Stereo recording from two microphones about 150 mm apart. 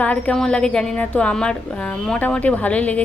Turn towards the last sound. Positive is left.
turn(degrees=10)  # may be behind; listen again after turning